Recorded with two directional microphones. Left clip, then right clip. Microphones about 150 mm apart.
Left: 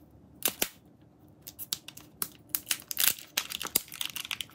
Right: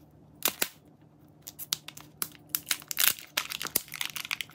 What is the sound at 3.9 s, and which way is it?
Typing, 15° right (ahead or behind).